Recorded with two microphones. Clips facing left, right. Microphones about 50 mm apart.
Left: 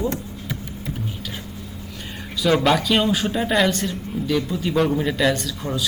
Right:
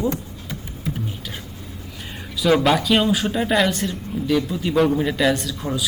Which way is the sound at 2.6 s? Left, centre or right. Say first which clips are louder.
Right 1 dB; centre.